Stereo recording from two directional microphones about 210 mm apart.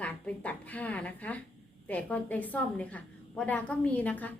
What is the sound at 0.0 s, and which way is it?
A woman's voice, 5° left (ahead or behind).